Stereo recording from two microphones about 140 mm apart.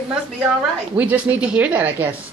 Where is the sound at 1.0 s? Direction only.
10° right (ahead or behind).